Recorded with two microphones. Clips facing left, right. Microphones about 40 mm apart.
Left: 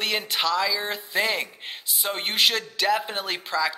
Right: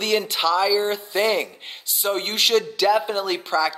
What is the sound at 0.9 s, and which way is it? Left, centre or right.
Speech, centre.